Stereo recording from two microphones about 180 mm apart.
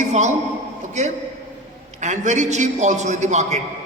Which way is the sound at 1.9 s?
40° right (ahead or behind).